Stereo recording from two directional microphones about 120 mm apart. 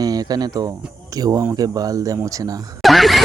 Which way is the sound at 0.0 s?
35° right (ahead or behind).